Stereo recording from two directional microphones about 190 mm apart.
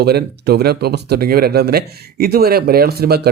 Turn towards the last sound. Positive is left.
turn(degrees=-55)  # may be behind; listen again after turning